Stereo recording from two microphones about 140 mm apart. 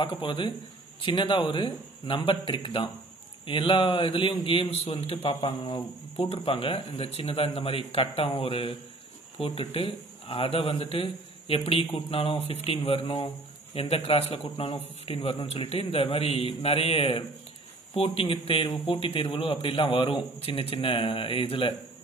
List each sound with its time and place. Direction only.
0.0 s a man's voice: 35° left (ahead or behind)